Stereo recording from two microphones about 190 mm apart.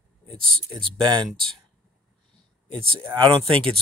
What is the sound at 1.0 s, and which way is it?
Speech, 20° right (ahead or behind).